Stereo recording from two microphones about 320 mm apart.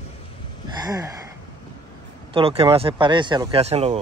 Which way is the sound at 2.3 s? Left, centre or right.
Centre.